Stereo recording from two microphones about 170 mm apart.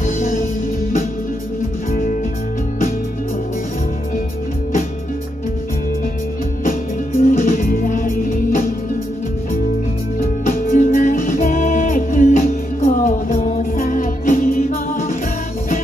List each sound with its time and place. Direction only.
0.0 s music: 55° left (ahead or behind)
1.9 s music: 55° left (ahead or behind)
7.2 s music: 50° left (ahead or behind)
10.4 s music: 50° left (ahead or behind)